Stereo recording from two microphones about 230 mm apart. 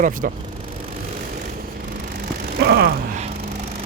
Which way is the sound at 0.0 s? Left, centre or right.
Right.